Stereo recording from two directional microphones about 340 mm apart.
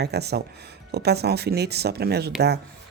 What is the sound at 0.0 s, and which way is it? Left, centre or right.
Speech, right.